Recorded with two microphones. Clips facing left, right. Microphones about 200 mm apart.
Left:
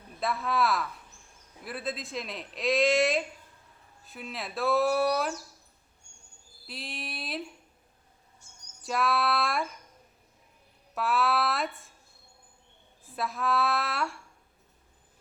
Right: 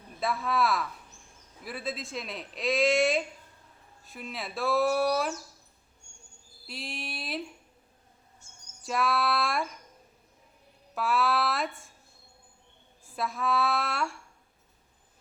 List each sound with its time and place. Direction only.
0.2 s speech: centre (ahead or behind)
6.7 s speech: centre (ahead or behind)
8.8 s speech: centre (ahead or behind)
10.9 s speech: centre (ahead or behind)
13.1 s speech: centre (ahead or behind)